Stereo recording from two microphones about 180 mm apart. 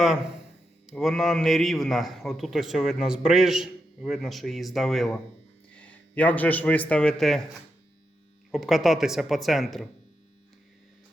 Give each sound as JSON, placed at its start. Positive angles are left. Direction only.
{"t": 0.9, "sound": "a man's voice", "side_deg": 0}
{"t": 8.5, "sound": "a man's voice", "side_deg": 0}